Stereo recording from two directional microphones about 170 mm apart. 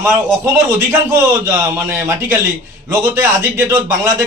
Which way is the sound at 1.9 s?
15° right (ahead or behind).